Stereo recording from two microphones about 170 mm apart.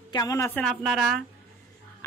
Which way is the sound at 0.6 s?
Centre (ahead or behind).